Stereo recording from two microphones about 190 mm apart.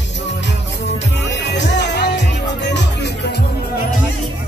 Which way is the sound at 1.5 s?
65° left (ahead or behind).